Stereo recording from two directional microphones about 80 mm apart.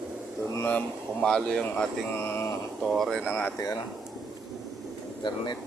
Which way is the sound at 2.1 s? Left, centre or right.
Left.